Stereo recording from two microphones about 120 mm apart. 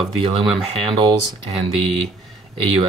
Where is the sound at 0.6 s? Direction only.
50° right (ahead or behind).